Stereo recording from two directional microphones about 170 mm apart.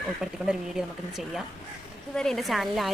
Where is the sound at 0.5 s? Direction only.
5° right (ahead or behind).